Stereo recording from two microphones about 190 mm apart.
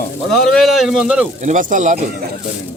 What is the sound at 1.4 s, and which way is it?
Speech, 40° right (ahead or behind).